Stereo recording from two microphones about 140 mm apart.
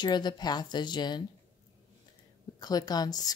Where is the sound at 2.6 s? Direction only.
30° left (ahead or behind).